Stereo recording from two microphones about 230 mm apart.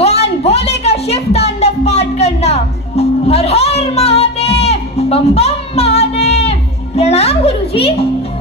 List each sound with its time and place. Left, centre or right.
0.4 s music: left
7.0 s a woman's voice: left